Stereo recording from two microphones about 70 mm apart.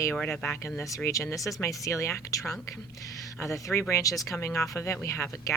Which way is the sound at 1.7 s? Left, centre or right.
Left.